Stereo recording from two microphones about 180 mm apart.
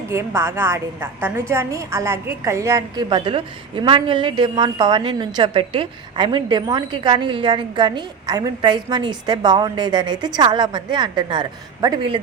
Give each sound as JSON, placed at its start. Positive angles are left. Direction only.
{"t": 0.1, "sound": "a woman's voice", "side_deg": -15}